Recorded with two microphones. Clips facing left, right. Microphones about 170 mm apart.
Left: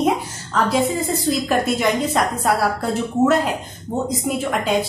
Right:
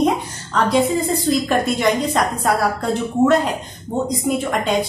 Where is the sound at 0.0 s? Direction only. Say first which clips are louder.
Right 1 dB; centre (ahead or behind).